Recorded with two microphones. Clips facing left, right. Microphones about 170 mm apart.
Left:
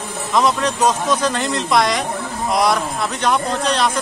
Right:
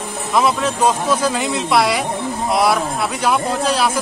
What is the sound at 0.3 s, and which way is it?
Speech, 5° right (ahead or behind).